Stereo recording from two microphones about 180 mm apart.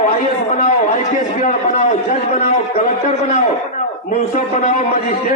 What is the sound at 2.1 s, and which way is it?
A man's voice, 40° left (ahead or behind).